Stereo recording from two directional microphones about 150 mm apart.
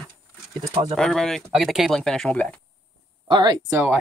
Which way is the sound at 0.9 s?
Centre (ahead or behind).